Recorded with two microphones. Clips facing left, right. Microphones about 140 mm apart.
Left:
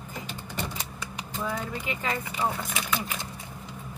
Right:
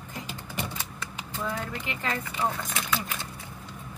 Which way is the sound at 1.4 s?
10° left (ahead or behind).